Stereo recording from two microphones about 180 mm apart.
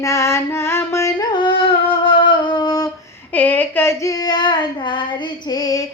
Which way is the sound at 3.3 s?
10° left (ahead or behind).